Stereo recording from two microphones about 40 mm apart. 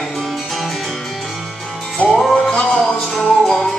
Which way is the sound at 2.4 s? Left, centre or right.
Centre.